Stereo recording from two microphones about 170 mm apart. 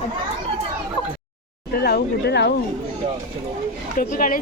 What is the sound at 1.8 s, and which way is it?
Speech, 75° left (ahead or behind).